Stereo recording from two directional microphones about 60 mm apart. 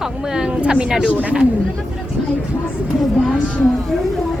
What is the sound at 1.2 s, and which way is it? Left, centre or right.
Speech, right.